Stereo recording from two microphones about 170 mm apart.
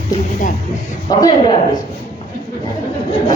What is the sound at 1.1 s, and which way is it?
Speech, 25° left (ahead or behind).